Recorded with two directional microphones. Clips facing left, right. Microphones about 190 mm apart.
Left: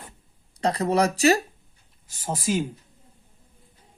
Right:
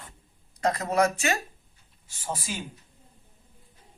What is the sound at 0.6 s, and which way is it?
Speech, 30° left (ahead or behind).